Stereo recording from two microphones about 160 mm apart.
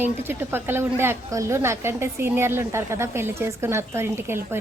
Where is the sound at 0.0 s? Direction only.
15° right (ahead or behind).